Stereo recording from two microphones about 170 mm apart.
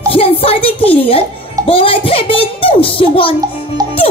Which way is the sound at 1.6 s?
35° left (ahead or behind).